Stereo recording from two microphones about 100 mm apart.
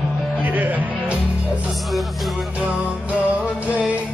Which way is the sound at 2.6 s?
15° right (ahead or behind).